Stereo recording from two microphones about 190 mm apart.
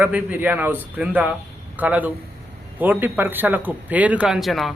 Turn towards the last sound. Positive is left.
turn(degrees=0)  # may be behind; listen again after turning